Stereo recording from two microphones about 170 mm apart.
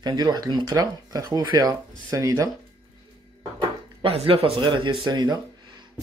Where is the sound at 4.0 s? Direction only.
35° right (ahead or behind).